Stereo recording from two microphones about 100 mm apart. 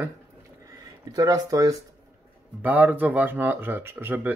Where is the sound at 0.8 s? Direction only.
40° right (ahead or behind).